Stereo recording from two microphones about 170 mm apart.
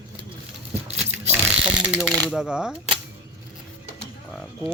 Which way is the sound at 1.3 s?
5° right (ahead or behind).